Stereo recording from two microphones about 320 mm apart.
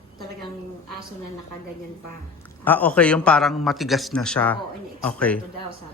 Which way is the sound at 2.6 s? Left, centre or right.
Centre.